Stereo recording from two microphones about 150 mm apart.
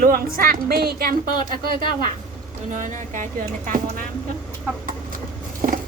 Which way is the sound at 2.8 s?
60° right (ahead or behind).